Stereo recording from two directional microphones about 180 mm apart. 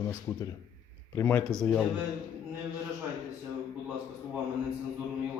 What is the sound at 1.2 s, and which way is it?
Speech, 10° left (ahead or behind).